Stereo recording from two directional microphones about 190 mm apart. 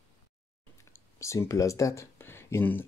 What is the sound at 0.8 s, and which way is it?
Speech, 15° left (ahead or behind).